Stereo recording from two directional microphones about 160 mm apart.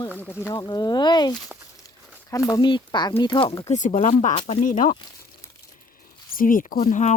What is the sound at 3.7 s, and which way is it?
Speech, 50° left (ahead or behind).